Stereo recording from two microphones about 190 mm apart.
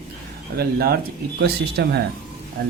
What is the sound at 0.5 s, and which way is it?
Speech, 55° right (ahead or behind).